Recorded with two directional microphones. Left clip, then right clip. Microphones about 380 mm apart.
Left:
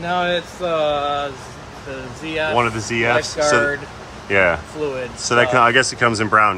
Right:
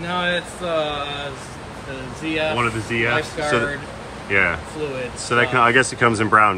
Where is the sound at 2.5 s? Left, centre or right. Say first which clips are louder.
Left 3 dB; centre.